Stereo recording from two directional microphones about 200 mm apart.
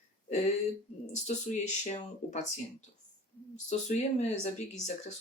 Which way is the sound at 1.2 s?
35° left (ahead or behind).